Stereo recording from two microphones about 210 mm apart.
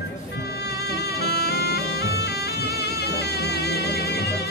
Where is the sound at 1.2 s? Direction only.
50° left (ahead or behind).